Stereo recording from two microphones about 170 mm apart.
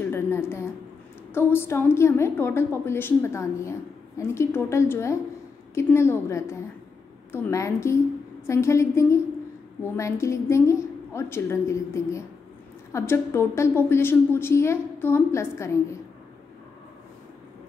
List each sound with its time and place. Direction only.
0.1 s a woman's voice: 15° left (ahead or behind)